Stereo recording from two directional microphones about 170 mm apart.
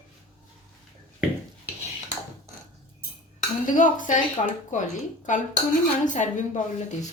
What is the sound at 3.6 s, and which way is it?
A woman's voice, 50° left (ahead or behind).